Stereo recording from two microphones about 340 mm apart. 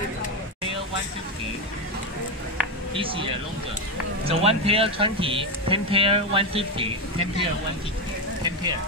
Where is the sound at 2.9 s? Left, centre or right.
Centre.